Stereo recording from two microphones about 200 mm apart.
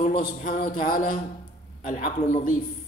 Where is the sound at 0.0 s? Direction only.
45° left (ahead or behind).